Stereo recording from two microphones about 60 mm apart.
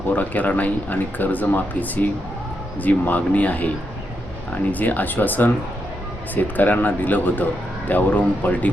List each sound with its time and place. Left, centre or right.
0.1 s speech: left
4.7 s speech: left